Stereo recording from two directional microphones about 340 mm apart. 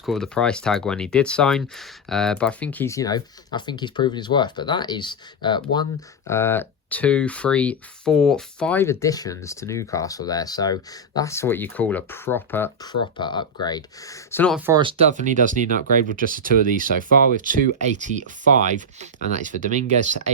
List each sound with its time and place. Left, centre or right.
0.0 s speech: centre
14.7 s speech: centre